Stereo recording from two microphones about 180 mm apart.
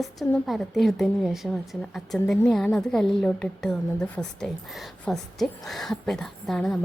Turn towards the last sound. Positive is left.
turn(degrees=0)  # may be behind; listen again after turning